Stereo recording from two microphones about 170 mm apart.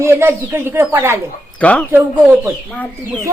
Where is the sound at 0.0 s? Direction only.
15° right (ahead or behind).